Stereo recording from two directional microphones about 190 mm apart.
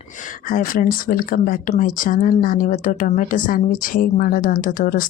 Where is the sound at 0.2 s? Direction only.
45° left (ahead or behind).